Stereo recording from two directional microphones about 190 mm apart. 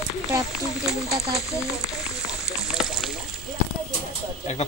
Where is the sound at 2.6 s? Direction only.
Centre (ahead or behind).